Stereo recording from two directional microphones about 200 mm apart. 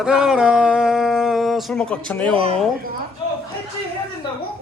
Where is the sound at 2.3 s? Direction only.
30° right (ahead or behind).